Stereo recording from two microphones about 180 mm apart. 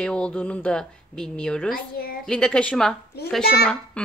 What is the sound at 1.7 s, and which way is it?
Speech, 55° left (ahead or behind).